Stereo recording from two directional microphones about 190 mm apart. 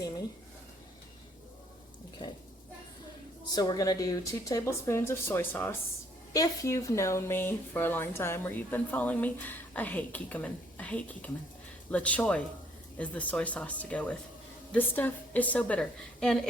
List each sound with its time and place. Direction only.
3.5 s speech: 20° left (ahead or behind); by 16.4 s 5° left (ahead or behind)